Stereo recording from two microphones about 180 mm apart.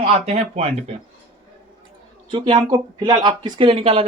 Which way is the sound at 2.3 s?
25° right (ahead or behind).